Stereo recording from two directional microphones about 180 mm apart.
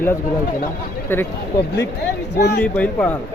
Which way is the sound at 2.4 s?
65° left (ahead or behind).